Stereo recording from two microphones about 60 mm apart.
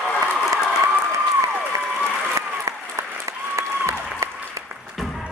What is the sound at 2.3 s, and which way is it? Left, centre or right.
Applause, right.